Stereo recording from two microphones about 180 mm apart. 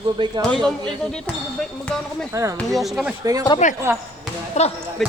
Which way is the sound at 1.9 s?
5° left (ahead or behind).